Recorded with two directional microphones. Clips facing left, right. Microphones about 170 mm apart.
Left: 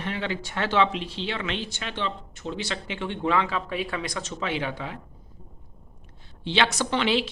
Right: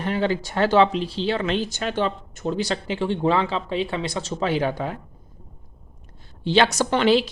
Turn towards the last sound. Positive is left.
turn(degrees=-40)  # may be behind; listen again after turning